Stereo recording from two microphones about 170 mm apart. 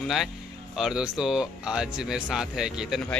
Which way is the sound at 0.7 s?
5° right (ahead or behind).